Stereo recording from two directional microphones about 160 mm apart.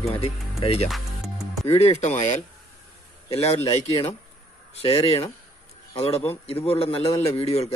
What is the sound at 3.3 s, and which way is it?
Music, 40° left (ahead or behind).